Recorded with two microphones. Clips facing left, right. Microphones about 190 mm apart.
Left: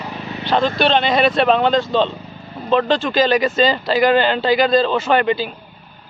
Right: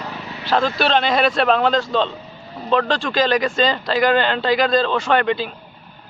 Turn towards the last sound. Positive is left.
turn(degrees=5)  # may be behind; listen again after turning